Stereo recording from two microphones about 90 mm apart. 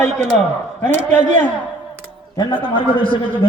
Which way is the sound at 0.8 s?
25° left (ahead or behind).